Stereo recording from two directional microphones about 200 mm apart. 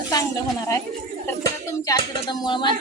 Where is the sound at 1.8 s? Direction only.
20° left (ahead or behind).